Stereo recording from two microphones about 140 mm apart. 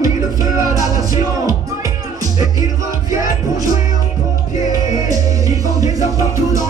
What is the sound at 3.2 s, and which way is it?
Music, 25° right (ahead or behind).